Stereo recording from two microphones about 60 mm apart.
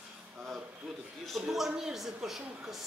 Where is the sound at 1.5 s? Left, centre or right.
Centre.